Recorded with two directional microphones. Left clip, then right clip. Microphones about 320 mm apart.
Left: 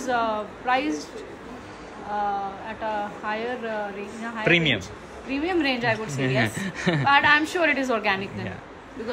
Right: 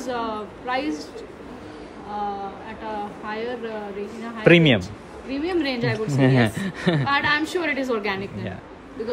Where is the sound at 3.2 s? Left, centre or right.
Centre.